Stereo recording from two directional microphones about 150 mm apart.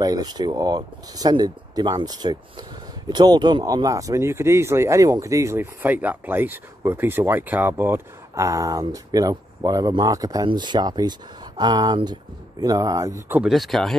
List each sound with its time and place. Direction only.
0.0 s speech: 25° right (ahead or behind)
13.4 s speech: centre (ahead or behind)